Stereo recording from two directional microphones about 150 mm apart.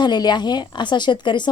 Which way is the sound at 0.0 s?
30° left (ahead or behind).